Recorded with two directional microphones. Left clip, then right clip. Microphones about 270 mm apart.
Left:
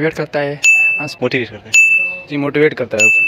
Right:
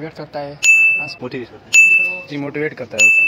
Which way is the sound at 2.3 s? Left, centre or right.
Left.